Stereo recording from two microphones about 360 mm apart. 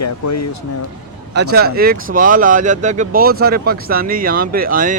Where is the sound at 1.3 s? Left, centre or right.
Right.